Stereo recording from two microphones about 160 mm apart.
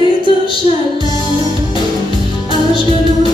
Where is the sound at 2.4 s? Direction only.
30° left (ahead or behind).